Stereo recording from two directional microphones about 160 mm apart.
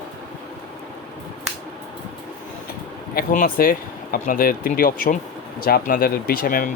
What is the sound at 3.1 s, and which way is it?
Speech, 65° left (ahead or behind).